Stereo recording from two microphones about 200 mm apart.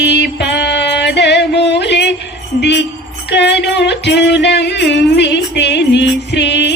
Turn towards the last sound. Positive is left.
turn(degrees=60)  # may be behind; listen again after turning